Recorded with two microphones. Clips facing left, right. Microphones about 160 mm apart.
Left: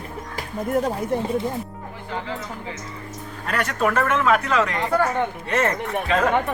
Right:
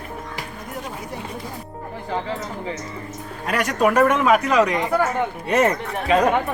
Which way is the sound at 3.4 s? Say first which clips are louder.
Right 3 dB; 15° right (ahead or behind).